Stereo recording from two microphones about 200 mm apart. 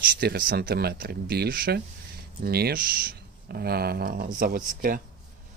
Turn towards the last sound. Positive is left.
turn(degrees=-45)  # may be behind; listen again after turning